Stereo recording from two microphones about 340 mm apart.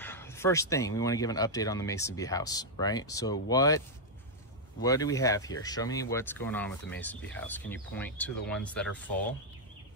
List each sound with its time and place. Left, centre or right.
0.0 s speech: centre
4.8 s speech: centre